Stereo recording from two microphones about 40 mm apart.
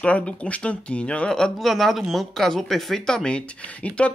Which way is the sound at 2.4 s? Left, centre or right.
Centre.